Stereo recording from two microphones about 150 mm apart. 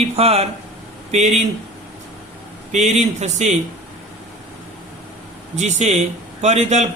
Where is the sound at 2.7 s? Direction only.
50° right (ahead or behind).